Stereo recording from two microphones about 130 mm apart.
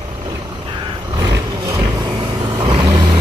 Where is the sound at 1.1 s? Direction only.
30° right (ahead or behind).